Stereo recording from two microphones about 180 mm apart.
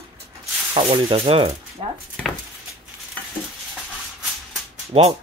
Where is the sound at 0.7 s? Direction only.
30° right (ahead or behind).